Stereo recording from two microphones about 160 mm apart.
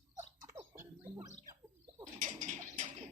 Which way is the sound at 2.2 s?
50° right (ahead or behind).